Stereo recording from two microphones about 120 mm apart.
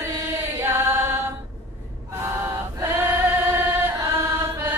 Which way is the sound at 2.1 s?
20° right (ahead or behind).